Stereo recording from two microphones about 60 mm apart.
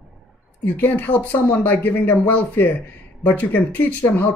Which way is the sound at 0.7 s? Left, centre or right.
Left.